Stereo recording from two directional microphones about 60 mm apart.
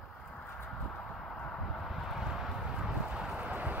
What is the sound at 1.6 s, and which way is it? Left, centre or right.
Vehicle, centre.